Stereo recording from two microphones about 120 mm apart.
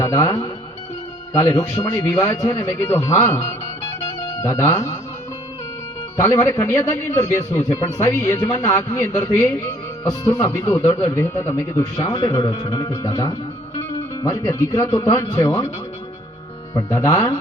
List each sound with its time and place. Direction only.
0.0 s a man's voice: 25° left (ahead or behind)
4.0 s music: 25° left (ahead or behind)
6.1 s a man's voice: 20° left (ahead or behind)
12.0 s speech: 40° left (ahead or behind)
12.3 s a man's voice: 30° left (ahead or behind)
16.7 s a man's voice: 25° left (ahead or behind)